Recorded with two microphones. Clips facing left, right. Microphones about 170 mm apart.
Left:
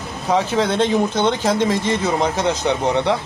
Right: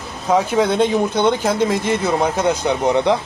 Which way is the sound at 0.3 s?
10° right (ahead or behind).